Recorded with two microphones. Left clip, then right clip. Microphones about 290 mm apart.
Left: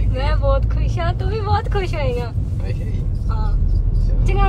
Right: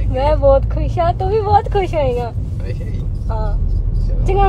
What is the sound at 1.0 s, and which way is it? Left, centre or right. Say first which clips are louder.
Speech: right 9 dB; centre.